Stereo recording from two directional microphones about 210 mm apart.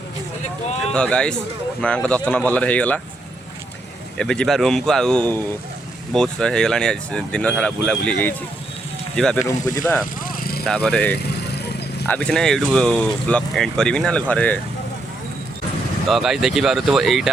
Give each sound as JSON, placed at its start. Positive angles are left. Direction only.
{"t": 0.9, "sound": "speech", "side_deg": 5}
{"t": 4.2, "sound": "speech", "side_deg": 5}
{"t": 9.6, "sound": "speech", "side_deg": 15}
{"t": 10.2, "sound": "vehicle", "side_deg": 45}
{"t": 10.7, "sound": "speech", "side_deg": 5}
{"t": 11.2, "sound": "vehicle", "side_deg": 50}
{"t": 12.0, "sound": "speech", "side_deg": 5}
{"t": 16.0, "sound": "speech", "side_deg": 0}